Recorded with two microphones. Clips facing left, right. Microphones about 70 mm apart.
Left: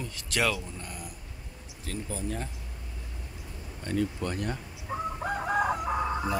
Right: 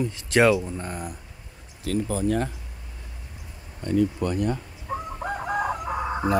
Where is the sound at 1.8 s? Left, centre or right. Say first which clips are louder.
Right 10 dB; right.